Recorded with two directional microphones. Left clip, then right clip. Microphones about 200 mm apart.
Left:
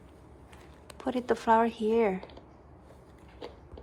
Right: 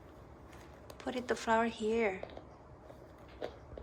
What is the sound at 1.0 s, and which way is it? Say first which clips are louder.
Speech: left 7 dB; centre (ahead or behind).